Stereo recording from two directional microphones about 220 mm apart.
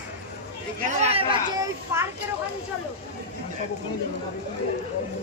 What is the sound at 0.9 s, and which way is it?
Speech, 25° right (ahead or behind).